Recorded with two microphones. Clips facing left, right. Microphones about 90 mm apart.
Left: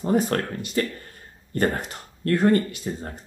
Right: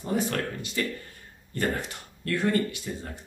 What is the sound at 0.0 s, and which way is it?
Speech, 45° left (ahead or behind).